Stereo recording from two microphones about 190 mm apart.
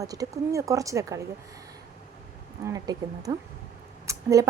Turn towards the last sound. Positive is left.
turn(degrees=-15)  # may be behind; listen again after turning